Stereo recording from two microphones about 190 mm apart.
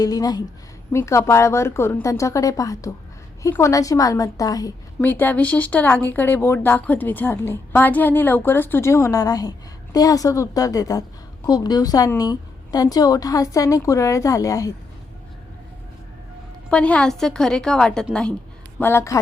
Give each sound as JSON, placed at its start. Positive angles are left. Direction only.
{"t": 0.0, "sound": "a woman's voice", "side_deg": 20}
{"t": 16.6, "sound": "a woman's voice", "side_deg": 5}